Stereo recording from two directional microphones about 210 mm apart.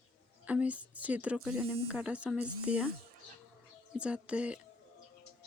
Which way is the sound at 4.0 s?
5° right (ahead or behind).